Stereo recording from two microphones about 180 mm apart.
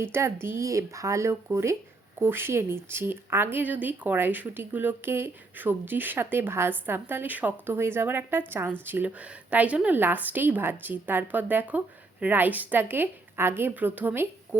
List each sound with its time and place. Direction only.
0.0 s speech: 15° right (ahead or behind)